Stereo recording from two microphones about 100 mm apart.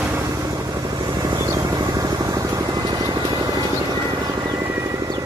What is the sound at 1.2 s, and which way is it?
Vehicle, 40° right (ahead or behind).